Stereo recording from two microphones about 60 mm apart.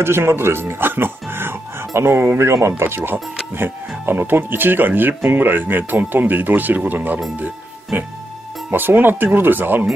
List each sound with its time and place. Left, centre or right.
0.0 s speech: right